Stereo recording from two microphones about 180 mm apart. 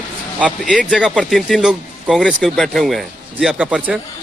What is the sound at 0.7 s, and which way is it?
Speech, centre (ahead or behind).